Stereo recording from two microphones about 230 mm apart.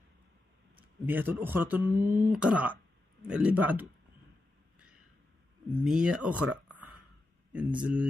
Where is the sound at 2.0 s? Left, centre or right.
Right.